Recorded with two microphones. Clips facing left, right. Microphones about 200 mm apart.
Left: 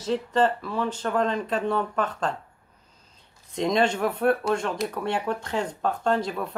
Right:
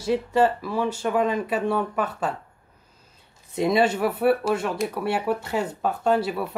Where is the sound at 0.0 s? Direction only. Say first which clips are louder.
Right 2 dB; 10° right (ahead or behind).